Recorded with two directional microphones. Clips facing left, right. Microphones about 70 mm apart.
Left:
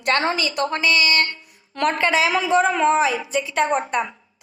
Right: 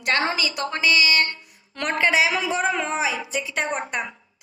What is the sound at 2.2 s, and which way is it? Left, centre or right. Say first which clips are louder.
Speech: left 5 dB; left.